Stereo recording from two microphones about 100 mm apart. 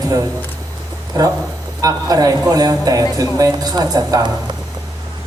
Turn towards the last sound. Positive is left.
turn(degrees=-40)  # may be behind; listen again after turning